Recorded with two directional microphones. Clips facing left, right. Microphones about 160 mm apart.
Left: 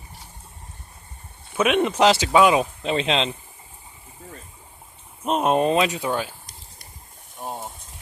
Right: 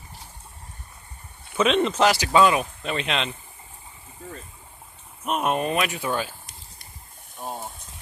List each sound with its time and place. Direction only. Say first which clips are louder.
1.5 s speech: left 1 dB; 10° left (ahead or behind); by 3.3 s 30° left (ahead or behind)
5.2 s speech: left 5 dB; 30° left (ahead or behind); by 6.3 s 15° left (ahead or behind)
6.4 s a sound: even; centre (ahead or behind)